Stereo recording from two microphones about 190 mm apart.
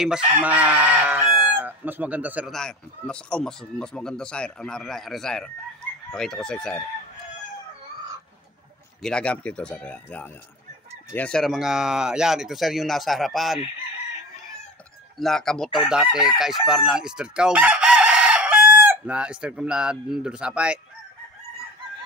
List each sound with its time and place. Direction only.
0.4 s chicken: 10° right (ahead or behind)
9.0 s speech: 5° left (ahead or behind)
11.1 s chicken: 5° left (ahead or behind)
15.1 s chicken: centre (ahead or behind)